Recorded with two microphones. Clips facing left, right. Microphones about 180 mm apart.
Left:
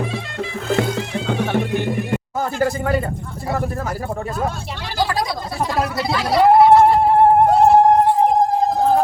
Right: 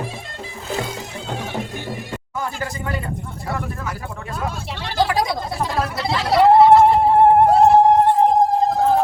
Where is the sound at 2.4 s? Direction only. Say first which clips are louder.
Left 6 dB; 40° left (ahead or behind).